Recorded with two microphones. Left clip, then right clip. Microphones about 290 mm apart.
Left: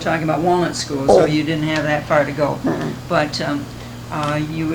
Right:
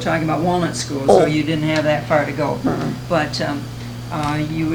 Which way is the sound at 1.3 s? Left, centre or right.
Left.